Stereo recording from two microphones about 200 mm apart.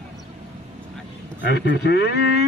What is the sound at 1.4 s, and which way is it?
Speech, 60° left (ahead or behind).